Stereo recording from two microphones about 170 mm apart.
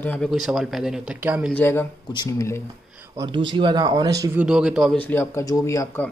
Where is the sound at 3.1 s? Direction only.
25° right (ahead or behind).